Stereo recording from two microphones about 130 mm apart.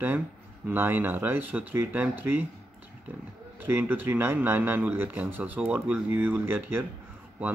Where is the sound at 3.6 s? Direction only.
15° right (ahead or behind).